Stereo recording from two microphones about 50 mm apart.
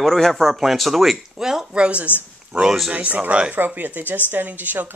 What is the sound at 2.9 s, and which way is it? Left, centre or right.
Speech, right.